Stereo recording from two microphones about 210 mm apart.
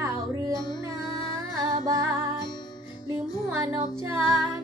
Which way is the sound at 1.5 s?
15° right (ahead or behind).